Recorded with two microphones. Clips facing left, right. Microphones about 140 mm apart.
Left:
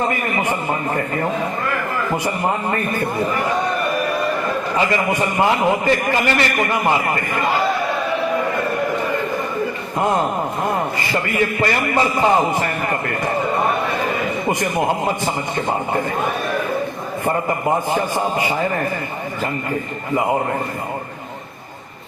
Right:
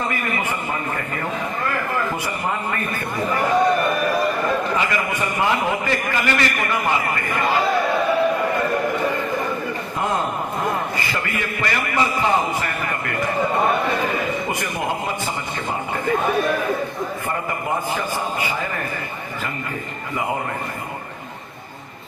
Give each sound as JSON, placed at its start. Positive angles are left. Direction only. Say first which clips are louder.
{"t": 0.9, "sound": "a man's voice", "louder": "left 6 dB", "side_deg": 35}
{"t": 4.8, "sound": "a man's voice", "louder": "left 4 dB", "side_deg": 30}
{"t": 11.6, "sound": "a man's voice", "louder": "left 1 dB", "side_deg": 35}